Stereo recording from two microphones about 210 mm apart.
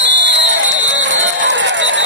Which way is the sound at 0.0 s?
60° right (ahead or behind).